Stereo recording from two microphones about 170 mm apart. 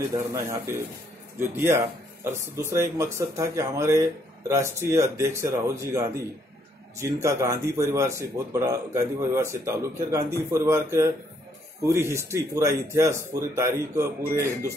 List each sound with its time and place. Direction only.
0.3 s a man's voice: 15° right (ahead or behind)